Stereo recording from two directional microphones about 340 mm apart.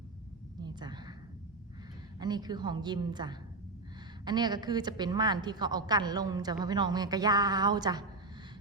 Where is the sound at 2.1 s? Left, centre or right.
Centre.